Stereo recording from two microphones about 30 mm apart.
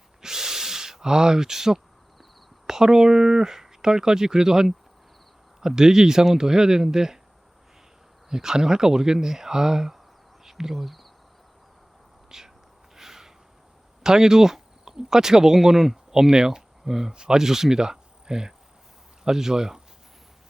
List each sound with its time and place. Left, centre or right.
0.2 s a sound: centre
2.6 s speech: centre
8.3 s speech: centre
12.3 s speech: centre
13.0 s a sound: centre
14.0 s speech: centre
15.5 s speech: centre
16.3 s speech: right
16.8 s speech: centre
17.1 s speech: right